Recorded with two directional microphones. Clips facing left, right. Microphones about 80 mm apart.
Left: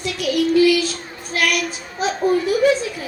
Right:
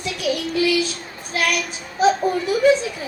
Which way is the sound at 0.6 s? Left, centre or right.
Right.